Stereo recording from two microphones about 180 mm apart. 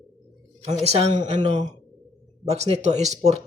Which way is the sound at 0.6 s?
35° right (ahead or behind).